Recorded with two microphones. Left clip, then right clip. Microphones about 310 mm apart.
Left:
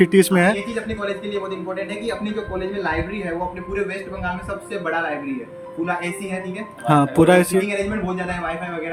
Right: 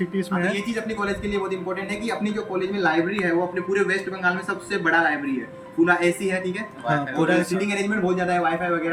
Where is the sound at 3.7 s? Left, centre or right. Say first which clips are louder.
Right 3 dB; centre.